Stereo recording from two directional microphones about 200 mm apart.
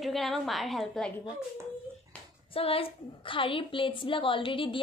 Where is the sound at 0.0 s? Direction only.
Centre (ahead or behind).